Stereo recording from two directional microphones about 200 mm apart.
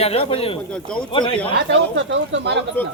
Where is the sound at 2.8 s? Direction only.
10° left (ahead or behind).